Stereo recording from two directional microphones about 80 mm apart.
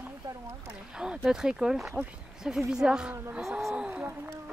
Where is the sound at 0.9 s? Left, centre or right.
Centre.